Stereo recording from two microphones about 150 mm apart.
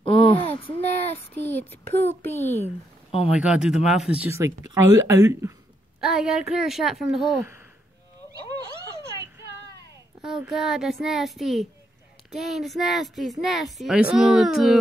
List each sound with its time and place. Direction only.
0.0 s a sound: 35° left (ahead or behind)
1.3 s speech: 10° left (ahead or behind)
2.6 s speech: 40° left (ahead or behind)
3.3 s speech: 5° right (ahead or behind)
5.9 s speech: 5° right (ahead or behind)
10.2 s speech: 5° right (ahead or behind)